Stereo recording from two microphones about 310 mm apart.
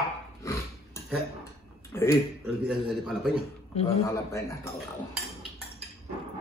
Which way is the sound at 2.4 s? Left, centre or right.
Centre.